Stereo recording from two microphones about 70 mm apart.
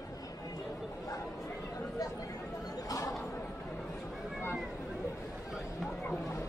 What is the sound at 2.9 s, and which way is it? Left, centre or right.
Chatter, left.